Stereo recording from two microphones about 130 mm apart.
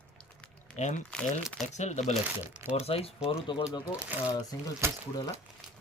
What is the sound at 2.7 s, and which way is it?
Speech, 50° left (ahead or behind).